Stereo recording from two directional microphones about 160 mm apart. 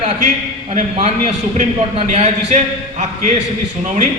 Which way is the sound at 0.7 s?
45° right (ahead or behind).